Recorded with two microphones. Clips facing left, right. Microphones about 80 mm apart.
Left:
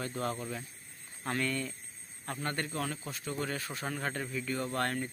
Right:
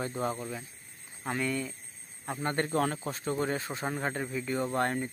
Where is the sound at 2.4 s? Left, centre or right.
Right.